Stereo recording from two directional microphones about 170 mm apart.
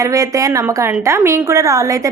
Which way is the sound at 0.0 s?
20° right (ahead or behind).